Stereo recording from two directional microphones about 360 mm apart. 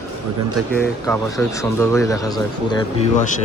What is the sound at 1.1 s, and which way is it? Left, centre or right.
Speech, centre.